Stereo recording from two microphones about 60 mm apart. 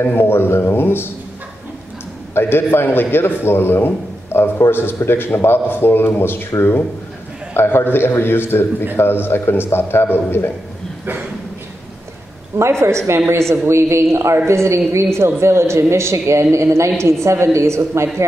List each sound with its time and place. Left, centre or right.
0.0 s a man's voice: left
2.3 s a man's voice: left
7.5 s a man's voice: left
12.5 s a woman's voice: right